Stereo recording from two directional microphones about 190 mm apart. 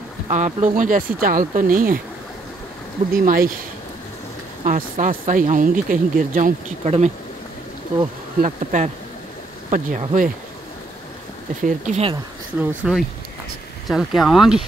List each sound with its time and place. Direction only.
0.3 s speech: 40° right (ahead or behind)
3.1 s speech: 50° right (ahead or behind)
4.6 s speech: 45° right (ahead or behind)
8.4 s speech: 40° right (ahead or behind)
11.6 s speech: 40° right (ahead or behind)
12.5 s speech: 5° right (ahead or behind)